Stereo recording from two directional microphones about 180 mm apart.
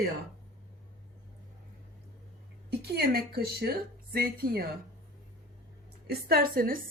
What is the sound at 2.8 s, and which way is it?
Speech, 60° right (ahead or behind).